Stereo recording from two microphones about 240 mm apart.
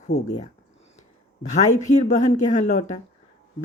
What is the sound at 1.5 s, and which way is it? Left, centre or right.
Speech, left.